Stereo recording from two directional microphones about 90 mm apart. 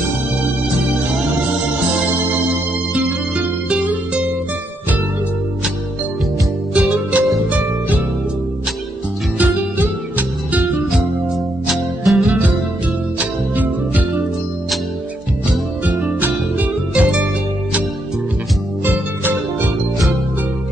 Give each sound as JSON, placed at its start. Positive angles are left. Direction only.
{"t": 2.9, "sound": "music", "side_deg": -15}
{"t": 6.7, "sound": "music", "side_deg": -15}
{"t": 9.4, "sound": "music", "side_deg": -20}
{"t": 10.9, "sound": "music", "side_deg": 0}
{"t": 13.1, "sound": "music", "side_deg": -15}
{"t": 15.8, "sound": "music", "side_deg": -15}
{"t": 18.9, "sound": "music", "side_deg": -20}